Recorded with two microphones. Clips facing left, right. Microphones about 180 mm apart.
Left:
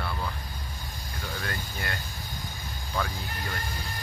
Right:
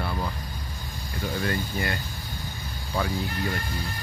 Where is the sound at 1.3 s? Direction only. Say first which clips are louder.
Right 9 dB; centre (ahead or behind).